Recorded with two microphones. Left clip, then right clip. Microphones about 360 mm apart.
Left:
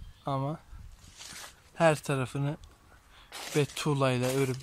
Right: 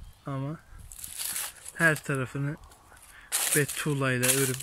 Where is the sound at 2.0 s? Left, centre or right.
Centre.